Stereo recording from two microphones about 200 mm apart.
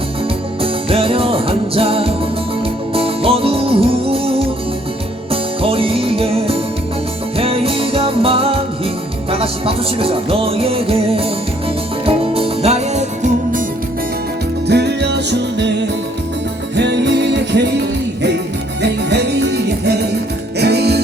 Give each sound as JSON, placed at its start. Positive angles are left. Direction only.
{"t": 0.6, "sound": "music", "side_deg": -30}
{"t": 14.7, "sound": "music", "side_deg": -55}
{"t": 18.8, "sound": "music", "side_deg": -60}